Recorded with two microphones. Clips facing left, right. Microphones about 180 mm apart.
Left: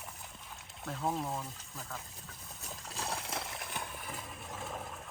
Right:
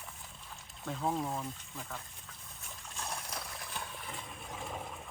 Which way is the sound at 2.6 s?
35° left (ahead or behind).